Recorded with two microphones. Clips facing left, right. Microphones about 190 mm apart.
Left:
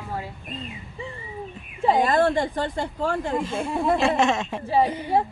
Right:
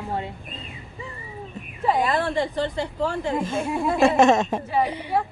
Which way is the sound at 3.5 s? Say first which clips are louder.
Left 1 dB; 45° right (ahead or behind).